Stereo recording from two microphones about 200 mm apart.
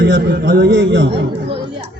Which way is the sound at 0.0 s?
55° right (ahead or behind).